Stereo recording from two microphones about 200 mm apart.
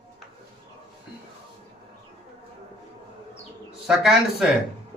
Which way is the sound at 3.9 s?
5° right (ahead or behind).